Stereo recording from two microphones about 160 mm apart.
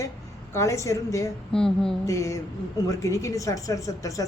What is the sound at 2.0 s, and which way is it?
A woman's voice, 20° left (ahead or behind).